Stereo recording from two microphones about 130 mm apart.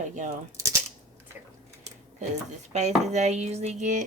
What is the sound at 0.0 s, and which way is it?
Speech, 70° right (ahead or behind).